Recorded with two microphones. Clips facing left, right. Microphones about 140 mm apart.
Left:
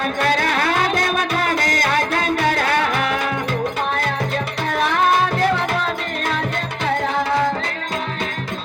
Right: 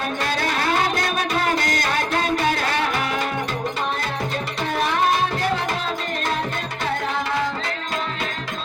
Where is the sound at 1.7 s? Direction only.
45° left (ahead or behind).